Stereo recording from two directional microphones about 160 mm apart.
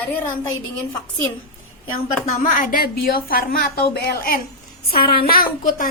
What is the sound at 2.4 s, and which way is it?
A woman's voice, 55° left (ahead or behind).